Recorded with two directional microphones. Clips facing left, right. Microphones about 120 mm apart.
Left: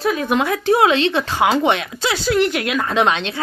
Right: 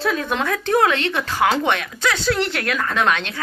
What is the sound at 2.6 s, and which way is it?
Speech, 20° left (ahead or behind).